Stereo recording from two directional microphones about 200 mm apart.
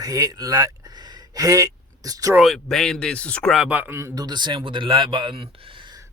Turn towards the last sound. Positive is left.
turn(degrees=-20)  # may be behind; listen again after turning